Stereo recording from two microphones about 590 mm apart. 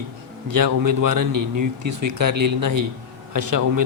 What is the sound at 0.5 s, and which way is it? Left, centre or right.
A man's voice, right.